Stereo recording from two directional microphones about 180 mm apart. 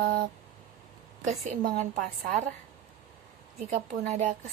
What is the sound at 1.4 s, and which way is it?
Speech, 40° right (ahead or behind).